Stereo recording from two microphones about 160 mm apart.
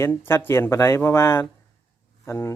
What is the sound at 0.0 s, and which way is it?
A man's voice, 15° left (ahead or behind).